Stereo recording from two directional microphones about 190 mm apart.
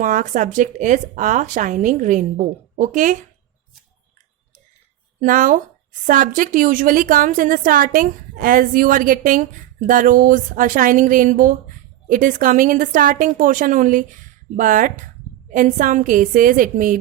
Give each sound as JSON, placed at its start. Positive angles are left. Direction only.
{"t": 0.0, "sound": "a woman's voice", "side_deg": -45}
{"t": 5.2, "sound": "a woman's voice", "side_deg": -45}